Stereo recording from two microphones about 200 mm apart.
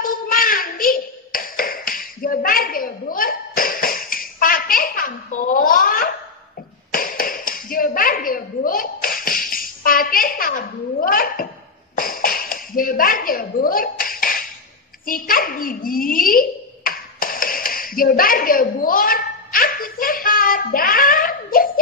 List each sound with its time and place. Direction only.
0.0 s tap: 45° left (ahead or behind)
6.9 s a sound: 45° left (ahead or behind)
15.0 s dog: 45° left (ahead or behind)